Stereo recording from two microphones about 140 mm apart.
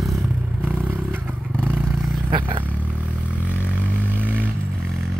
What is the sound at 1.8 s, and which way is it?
Vehicle, centre (ahead or behind).